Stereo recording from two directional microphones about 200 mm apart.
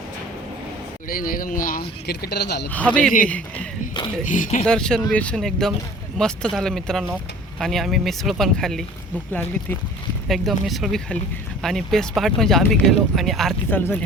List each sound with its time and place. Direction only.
1.0 s speech: 45° left (ahead or behind)
2.6 s speech: 5° left (ahead or behind)
4.3 s speech: 40° left (ahead or behind)
4.6 s speech: 5° left (ahead or behind)
10.2 s speech: centre (ahead or behind)